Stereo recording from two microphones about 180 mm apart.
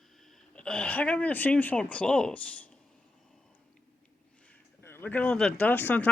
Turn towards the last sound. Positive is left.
turn(degrees=10)  # may be behind; listen again after turning